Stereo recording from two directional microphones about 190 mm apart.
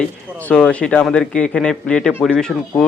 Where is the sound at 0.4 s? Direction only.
5° left (ahead or behind).